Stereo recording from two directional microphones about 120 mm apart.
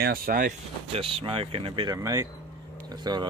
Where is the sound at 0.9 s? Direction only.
50° right (ahead or behind).